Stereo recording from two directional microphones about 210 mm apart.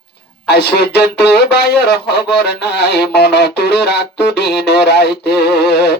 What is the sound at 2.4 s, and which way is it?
Speech, 50° left (ahead or behind).